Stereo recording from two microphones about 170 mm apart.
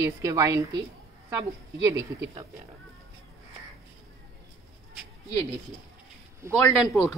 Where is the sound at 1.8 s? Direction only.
15° right (ahead or behind).